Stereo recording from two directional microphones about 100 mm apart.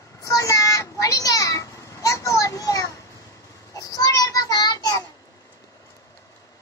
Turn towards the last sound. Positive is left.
turn(degrees=40)  # may be behind; listen again after turning